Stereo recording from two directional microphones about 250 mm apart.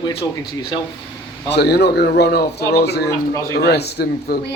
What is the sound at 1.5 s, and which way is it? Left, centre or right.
A man's voice, left.